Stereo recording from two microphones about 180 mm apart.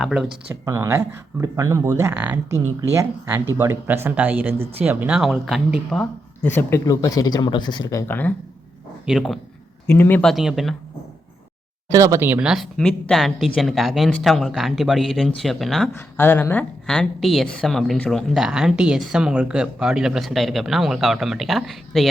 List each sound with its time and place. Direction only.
0.0 s a woman's voice: 5° right (ahead or behind)
0.6 s speech: 15° right (ahead or behind); by 8.3 s 10° left (ahead or behind)
9.0 s a woman's voice: centre (ahead or behind)
9.8 s a woman's voice: 10° left (ahead or behind)
11.9 s a woman's voice: 20° right (ahead or behind); by 15.9 s centre (ahead or behind)
16.0 s a woman's voice: 10° left (ahead or behind)